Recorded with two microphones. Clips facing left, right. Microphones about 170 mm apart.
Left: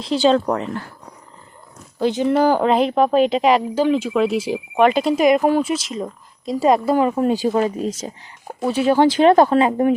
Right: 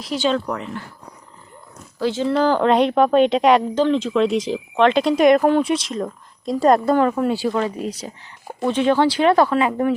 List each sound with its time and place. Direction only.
0.0 s speech: 30° left (ahead or behind)
2.0 s speech: 20° left (ahead or behind)
7.2 s speech: 20° left (ahead or behind)
8.4 s speech: 5° left (ahead or behind)
9.5 s speech: 30° left (ahead or behind)